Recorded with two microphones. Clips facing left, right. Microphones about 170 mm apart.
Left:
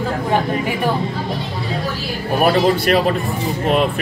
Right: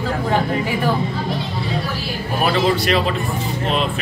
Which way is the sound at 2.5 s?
50° left (ahead or behind).